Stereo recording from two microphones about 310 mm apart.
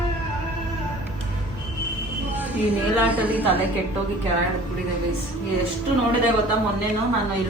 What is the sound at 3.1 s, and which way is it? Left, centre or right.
Speech, centre.